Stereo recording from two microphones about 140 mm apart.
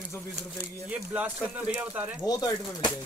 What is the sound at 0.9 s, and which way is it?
Speech, 10° right (ahead or behind).